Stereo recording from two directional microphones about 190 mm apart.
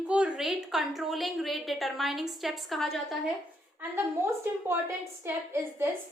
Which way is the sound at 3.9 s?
10° right (ahead or behind).